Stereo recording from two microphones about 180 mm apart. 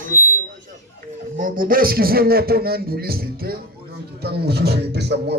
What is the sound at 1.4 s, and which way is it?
A man's voice, 50° right (ahead or behind).